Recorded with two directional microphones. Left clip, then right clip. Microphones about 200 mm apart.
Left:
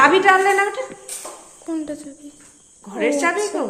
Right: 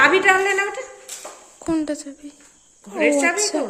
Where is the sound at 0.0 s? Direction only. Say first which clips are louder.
Left 2 dB; centre (ahead or behind).